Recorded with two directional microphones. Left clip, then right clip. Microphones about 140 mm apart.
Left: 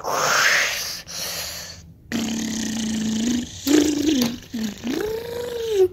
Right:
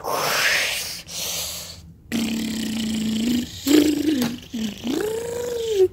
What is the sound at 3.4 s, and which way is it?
Purr, 20° right (ahead or behind).